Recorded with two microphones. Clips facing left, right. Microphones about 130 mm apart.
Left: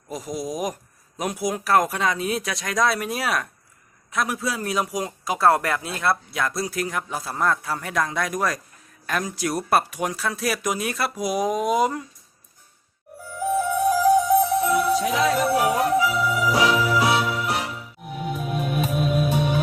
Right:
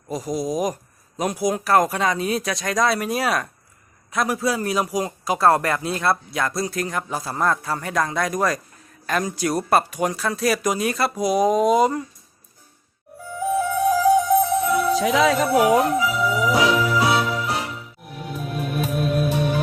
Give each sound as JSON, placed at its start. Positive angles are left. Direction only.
{"t": 0.1, "sound": "a man's voice", "side_deg": 0}
{"t": 13.4, "sound": "music", "side_deg": 0}
{"t": 15.0, "sound": "music", "side_deg": -90}
{"t": 16.0, "sound": "music", "side_deg": 0}